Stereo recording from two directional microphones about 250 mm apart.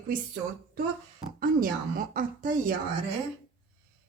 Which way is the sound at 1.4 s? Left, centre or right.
Right.